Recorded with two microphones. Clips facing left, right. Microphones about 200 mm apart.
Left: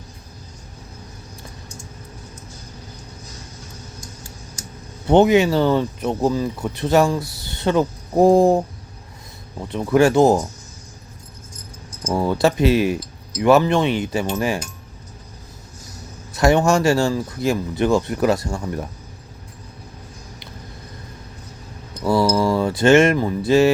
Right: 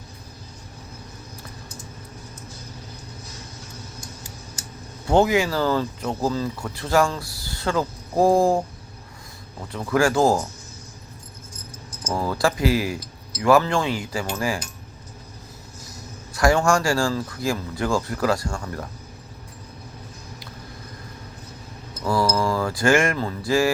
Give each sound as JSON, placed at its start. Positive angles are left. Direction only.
{"t": 5.0, "sound": "speech", "side_deg": 20}
{"t": 12.1, "sound": "speech", "side_deg": 25}
{"t": 16.3, "sound": "speech", "side_deg": 20}
{"t": 22.0, "sound": "speech", "side_deg": 25}